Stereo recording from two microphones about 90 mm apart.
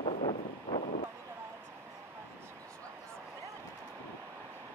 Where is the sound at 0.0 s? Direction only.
90° left.